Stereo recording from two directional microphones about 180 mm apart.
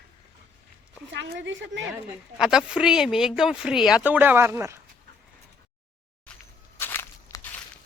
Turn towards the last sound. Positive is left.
turn(degrees=10)  # may be behind; listen again after turning